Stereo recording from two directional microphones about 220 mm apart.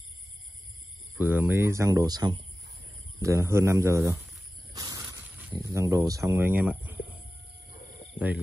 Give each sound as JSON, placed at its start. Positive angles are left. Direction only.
{"t": 1.1, "sound": "speech", "side_deg": -10}
{"t": 4.7, "sound": "a sound", "side_deg": -15}
{"t": 6.0, "sound": "speech", "side_deg": -15}
{"t": 7.8, "sound": "cricket", "side_deg": 30}